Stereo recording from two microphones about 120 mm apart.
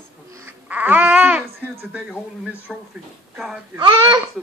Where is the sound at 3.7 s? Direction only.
40° right (ahead or behind).